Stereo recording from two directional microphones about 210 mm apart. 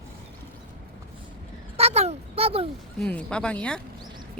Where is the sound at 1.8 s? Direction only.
30° right (ahead or behind).